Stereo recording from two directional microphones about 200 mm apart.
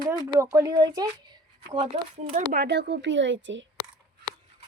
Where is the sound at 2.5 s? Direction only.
55° right (ahead or behind).